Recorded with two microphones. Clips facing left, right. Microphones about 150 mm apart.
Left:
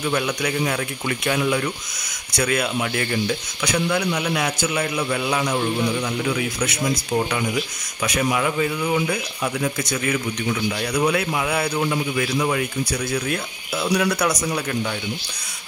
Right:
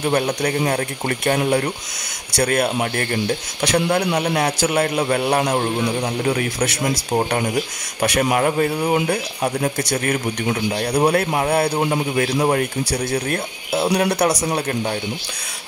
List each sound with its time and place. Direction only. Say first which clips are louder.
0.0 s a man's voice: right 4 dB; 40° right (ahead or behind)